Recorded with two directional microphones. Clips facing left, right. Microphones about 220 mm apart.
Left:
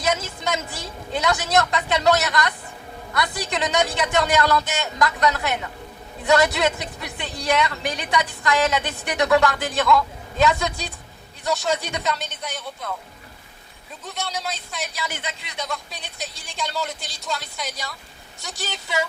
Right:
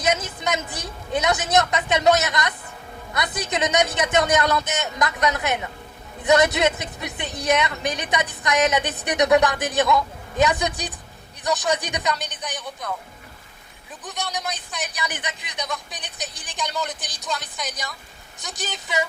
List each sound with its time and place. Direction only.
0.0 s a woman's voice: 20° right (ahead or behind)
14.0 s speech: 15° right (ahead or behind)
16.7 s speech: centre (ahead or behind)
17.0 s a woman's voice: 20° right (ahead or behind)